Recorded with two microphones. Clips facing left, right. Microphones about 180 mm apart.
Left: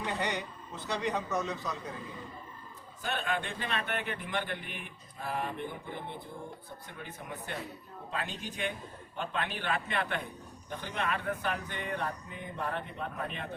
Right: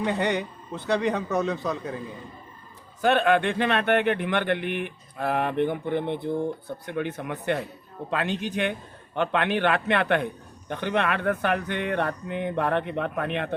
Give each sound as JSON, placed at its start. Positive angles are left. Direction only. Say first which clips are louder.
{"t": 0.0, "sound": "a man's voice", "louder": "right 9 dB", "side_deg": -60}
{"t": 3.0, "sound": "a man's voice", "louder": "right 14 dB", "side_deg": -80}